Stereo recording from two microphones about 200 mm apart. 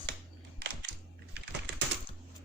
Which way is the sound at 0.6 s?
55° right (ahead or behind).